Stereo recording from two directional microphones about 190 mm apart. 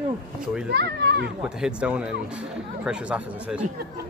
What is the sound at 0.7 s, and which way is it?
Speech, 60° right (ahead or behind).